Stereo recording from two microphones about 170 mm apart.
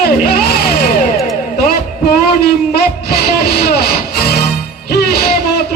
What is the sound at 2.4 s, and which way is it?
Music, 65° left (ahead or behind).